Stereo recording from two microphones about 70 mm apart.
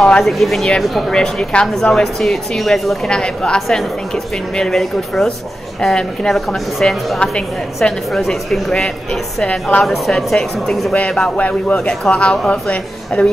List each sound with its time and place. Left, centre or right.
0.0 s speech: centre
3.1 s speech: centre